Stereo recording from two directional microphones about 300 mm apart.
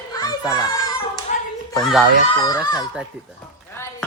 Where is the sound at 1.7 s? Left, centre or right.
Centre.